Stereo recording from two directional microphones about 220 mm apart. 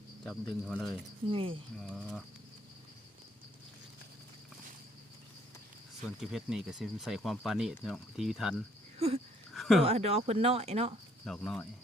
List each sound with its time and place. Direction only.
0.3 s speech: 5° left (ahead or behind)
1.3 s speech: 25° right (ahead or behind)
1.8 s speech: centre (ahead or behind)
6.1 s speech: centre (ahead or behind)
9.0 s wheeze: 30° right (ahead or behind)
9.6 s a sound: centre (ahead or behind)
9.8 s speech: 25° right (ahead or behind)
11.3 s speech: centre (ahead or behind)